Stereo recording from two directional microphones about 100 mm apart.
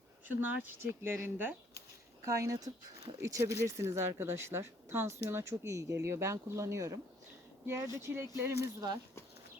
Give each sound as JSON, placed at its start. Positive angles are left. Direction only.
{"t": 0.3, "sound": "speech", "side_deg": -20}
{"t": 2.2, "sound": "speech", "side_deg": -35}